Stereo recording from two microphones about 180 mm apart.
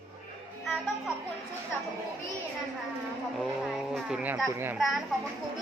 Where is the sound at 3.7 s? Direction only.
5° right (ahead or behind).